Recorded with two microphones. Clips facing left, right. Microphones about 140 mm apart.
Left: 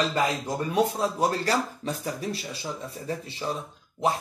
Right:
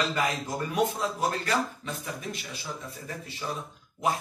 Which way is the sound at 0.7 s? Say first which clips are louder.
Left 3 dB; 30° left (ahead or behind).